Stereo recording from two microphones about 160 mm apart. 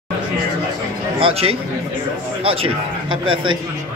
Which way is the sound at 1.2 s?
35° right (ahead or behind).